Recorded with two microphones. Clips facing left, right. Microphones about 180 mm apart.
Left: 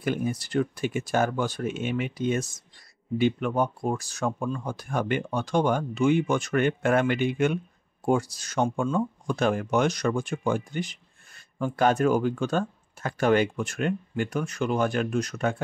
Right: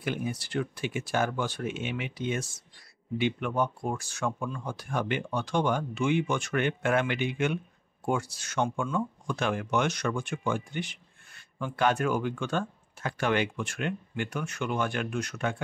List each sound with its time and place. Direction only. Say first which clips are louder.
0.0 s speech: left 5 dB; 45° left (ahead or behind)